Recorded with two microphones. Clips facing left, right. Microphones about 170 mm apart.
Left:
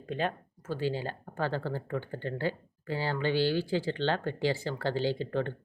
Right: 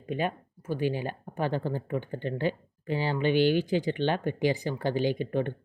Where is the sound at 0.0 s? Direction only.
10° right (ahead or behind).